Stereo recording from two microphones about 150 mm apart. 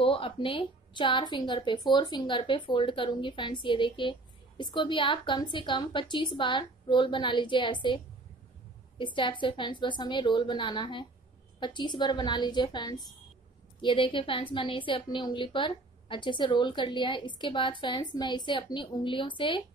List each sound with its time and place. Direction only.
0.0 s a woman's voice: 35° left (ahead or behind)